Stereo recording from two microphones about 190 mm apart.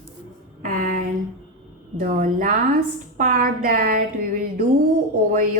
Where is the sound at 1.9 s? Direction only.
45° right (ahead or behind).